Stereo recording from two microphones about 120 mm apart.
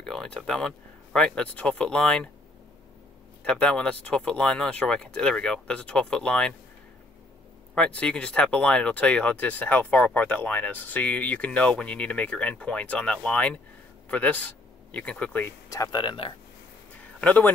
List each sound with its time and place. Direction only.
0.0 s speech: 5° left (ahead or behind)
3.4 s speech: 5° left (ahead or behind)
7.7 s speech: 10° left (ahead or behind)
15.7 s speech: 30° left (ahead or behind)
16.9 s a sound: 10° left (ahead or behind)